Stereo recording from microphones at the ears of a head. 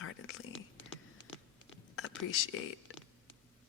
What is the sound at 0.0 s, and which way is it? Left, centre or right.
Whispering, left.